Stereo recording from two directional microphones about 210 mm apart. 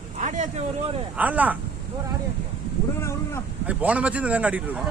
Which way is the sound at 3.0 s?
15° left (ahead or behind).